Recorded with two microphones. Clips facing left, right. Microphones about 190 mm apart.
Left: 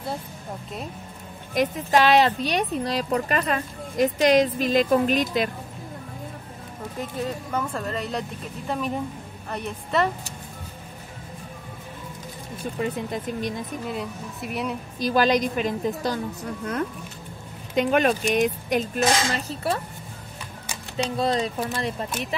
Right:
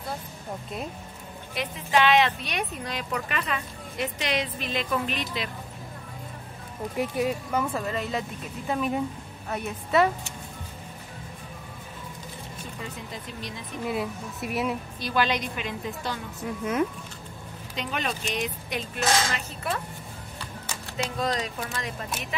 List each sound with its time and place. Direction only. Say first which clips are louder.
1.5 s speech: left 5 dB; 45° left (ahead or behind)
7.0 s speech: right 3 dB; 10° right (ahead or behind)
12.8 s speech: left 12 dB; 55° left (ahead or behind)
13.8 s speech: right 1 dB; 5° right (ahead or behind)
15.0 s speech: left 8 dB; 40° left (ahead or behind)
16.4 s speech: right 5 dB; 5° right (ahead or behind)
17.7 s speech: left 11 dB; 50° left (ahead or behind); by 19.8 s 35° left (ahead or behind)
21.2 s speech: left 5 dB; 30° left (ahead or behind)